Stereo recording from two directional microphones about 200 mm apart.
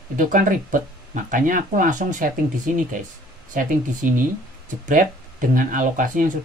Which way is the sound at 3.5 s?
40° right (ahead or behind).